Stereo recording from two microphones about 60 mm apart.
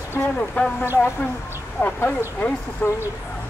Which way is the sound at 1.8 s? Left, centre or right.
Left.